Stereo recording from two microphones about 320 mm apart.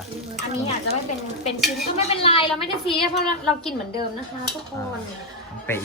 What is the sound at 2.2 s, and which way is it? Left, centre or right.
Speech, centre.